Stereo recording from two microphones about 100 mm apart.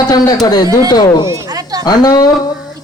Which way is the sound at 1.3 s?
35° right (ahead or behind).